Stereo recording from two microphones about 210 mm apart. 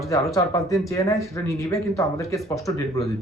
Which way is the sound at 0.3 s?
15° left (ahead or behind).